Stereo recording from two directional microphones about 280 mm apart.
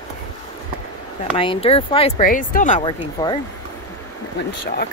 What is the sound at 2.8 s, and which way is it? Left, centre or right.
Speech, centre.